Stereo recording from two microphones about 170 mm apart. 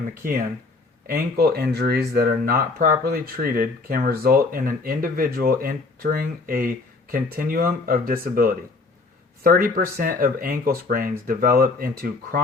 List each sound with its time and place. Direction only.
1.0 s speech: 60° right (ahead or behind)
9.6 s speech: 55° right (ahead or behind)